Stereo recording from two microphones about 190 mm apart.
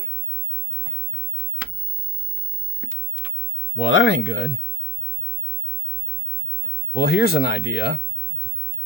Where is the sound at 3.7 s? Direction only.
80° left.